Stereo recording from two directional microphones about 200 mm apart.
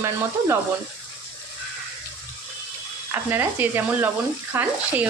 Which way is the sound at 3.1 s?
10° right (ahead or behind).